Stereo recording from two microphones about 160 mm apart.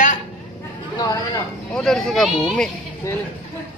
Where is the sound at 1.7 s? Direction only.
Centre (ahead or behind).